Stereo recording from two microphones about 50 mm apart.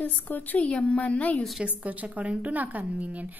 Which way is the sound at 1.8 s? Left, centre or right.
Right.